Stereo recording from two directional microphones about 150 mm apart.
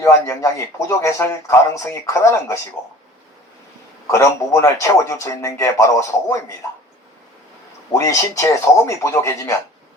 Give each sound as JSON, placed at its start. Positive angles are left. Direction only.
{"t": 0.0, "sound": "speech", "side_deg": 20}
{"t": 4.0, "sound": "speech", "side_deg": 20}
{"t": 7.9, "sound": "speech", "side_deg": 20}
{"t": 8.7, "sound": "speech", "side_deg": 10}
{"t": 9.1, "sound": "speech", "side_deg": 20}